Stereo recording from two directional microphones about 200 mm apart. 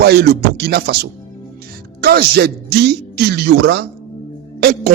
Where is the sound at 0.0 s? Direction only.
50° right (ahead or behind).